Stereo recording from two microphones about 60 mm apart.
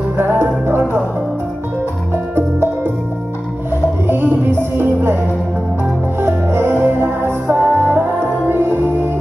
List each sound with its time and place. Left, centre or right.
0.2 s music: right
4.1 s music: right
6.2 s music: right